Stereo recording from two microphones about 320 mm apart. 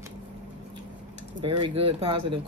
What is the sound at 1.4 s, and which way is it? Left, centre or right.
Speech, centre.